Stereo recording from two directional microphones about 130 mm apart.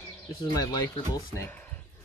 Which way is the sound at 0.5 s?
30° left (ahead or behind).